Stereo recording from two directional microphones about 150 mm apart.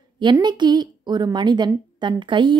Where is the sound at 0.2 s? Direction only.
30° right (ahead or behind).